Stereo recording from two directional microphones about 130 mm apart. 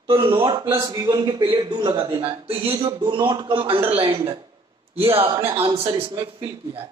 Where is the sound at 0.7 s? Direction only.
25° right (ahead or behind); by 6.9 s 45° right (ahead or behind).